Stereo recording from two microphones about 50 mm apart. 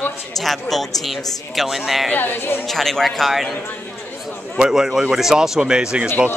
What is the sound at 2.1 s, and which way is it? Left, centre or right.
Speech, left.